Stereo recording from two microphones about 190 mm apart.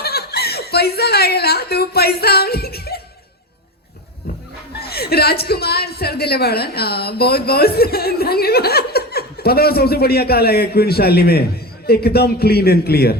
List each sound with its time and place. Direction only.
0.0 s speech: 55° left (ahead or behind)
4.8 s a woman's voice: 55° left (ahead or behind)